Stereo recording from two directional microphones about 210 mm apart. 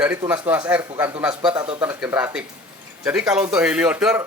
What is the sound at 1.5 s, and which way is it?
Speech, 25° right (ahead or behind).